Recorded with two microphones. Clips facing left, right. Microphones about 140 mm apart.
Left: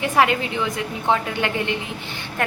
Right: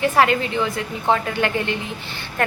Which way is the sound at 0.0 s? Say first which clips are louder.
Right 2 dB; 15° left (ahead or behind).